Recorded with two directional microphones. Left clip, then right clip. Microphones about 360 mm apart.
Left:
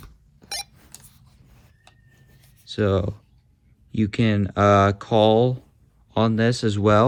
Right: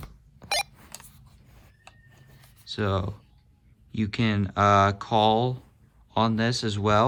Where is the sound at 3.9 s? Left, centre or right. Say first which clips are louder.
Left 5 dB; centre.